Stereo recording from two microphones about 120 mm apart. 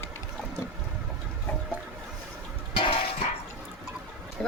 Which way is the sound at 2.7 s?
50° left (ahead or behind).